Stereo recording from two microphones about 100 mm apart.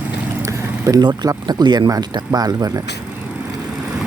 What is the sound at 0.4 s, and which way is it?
Speech, 40° right (ahead or behind).